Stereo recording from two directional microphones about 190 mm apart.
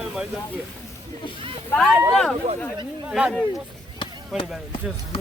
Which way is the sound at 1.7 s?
Centre (ahead or behind).